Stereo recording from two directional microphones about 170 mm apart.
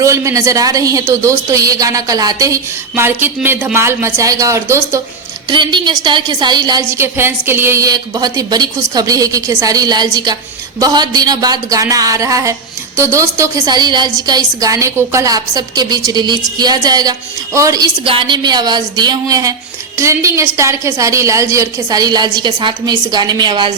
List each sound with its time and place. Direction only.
0.0 s a woman's voice: 20° right (ahead or behind)
5.5 s a woman's voice: 25° right (ahead or behind)